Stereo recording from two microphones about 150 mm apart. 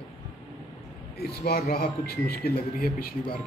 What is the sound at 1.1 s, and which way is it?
A man's voice, 90° left.